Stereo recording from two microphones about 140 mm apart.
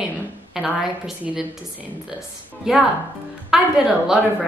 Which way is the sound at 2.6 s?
5° right (ahead or behind).